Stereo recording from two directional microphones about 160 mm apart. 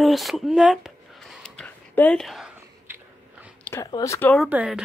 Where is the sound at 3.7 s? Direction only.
20° left (ahead or behind).